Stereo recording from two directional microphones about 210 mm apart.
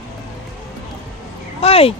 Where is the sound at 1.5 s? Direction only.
30° left (ahead or behind).